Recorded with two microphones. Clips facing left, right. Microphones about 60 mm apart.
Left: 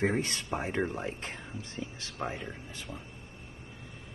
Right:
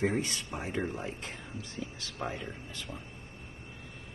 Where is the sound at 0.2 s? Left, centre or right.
Left.